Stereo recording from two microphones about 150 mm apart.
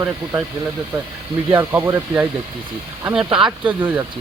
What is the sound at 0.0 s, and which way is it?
Speech, 10° right (ahead or behind).